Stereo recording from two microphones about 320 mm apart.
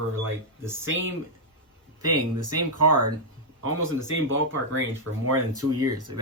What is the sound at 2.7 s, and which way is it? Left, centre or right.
A man's voice, right.